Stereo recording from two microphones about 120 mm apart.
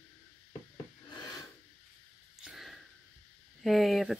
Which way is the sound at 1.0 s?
35° left (ahead or behind).